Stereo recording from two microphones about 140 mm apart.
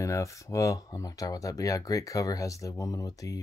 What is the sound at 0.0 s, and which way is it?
Speech, 20° left (ahead or behind).